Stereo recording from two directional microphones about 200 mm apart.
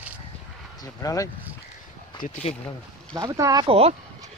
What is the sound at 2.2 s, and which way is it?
Speech, 35° left (ahead or behind).